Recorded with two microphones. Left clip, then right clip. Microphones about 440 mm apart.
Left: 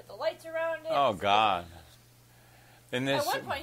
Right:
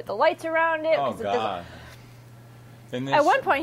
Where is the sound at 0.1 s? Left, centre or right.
Right.